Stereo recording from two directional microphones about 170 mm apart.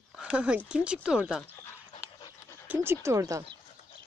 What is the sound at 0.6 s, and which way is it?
Speech, 5° right (ahead or behind).